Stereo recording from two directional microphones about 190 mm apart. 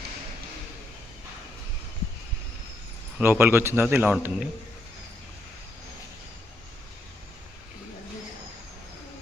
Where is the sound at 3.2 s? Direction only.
10° right (ahead or behind).